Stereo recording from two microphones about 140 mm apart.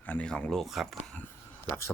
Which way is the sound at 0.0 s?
10° left (ahead or behind).